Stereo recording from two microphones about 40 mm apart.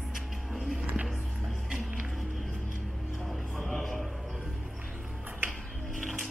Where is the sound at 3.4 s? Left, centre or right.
Centre.